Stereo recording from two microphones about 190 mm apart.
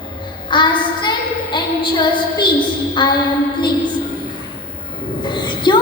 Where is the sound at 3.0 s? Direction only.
25° left (ahead or behind).